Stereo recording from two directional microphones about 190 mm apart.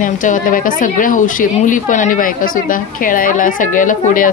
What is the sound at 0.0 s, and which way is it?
A woman's voice, 45° left (ahead or behind).